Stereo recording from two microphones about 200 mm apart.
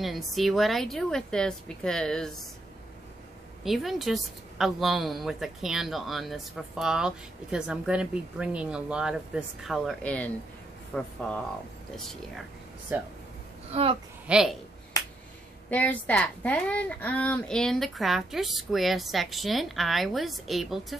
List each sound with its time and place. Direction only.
0.0 s a woman's voice: centre (ahead or behind)
3.6 s a woman's voice: centre (ahead or behind)
12.9 s speech: 10° right (ahead or behind)
14.2 s speech: 5° right (ahead or behind)
15.0 s finger snapping: 15° left (ahead or behind)
15.7 s a woman's voice: 5° left (ahead or behind)